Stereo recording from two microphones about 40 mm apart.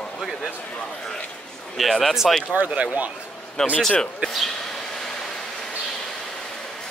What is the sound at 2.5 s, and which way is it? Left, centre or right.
Speech, right.